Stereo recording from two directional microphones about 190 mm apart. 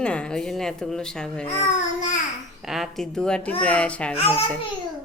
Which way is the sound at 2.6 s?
Centre (ahead or behind).